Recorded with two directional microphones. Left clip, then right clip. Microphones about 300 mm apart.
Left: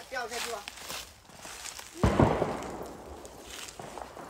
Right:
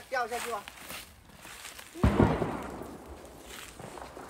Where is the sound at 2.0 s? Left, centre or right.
Left.